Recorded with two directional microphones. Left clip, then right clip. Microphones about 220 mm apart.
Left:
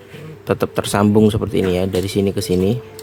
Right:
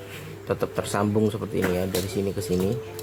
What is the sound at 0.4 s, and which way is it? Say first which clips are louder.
Speech: left 8 dB; 45° left (ahead or behind).